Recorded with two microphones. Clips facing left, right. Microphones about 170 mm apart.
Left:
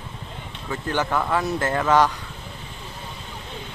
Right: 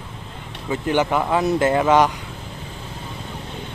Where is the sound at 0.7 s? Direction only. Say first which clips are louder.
Right 5 dB; 15° right (ahead or behind).